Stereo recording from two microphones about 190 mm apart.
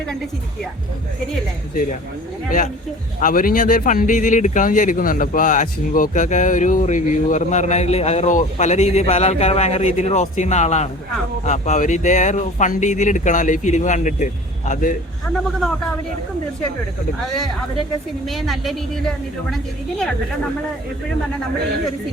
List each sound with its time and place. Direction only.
3.2 s a man's voice: 45° left (ahead or behind)
17.2 s a woman's voice: centre (ahead or behind)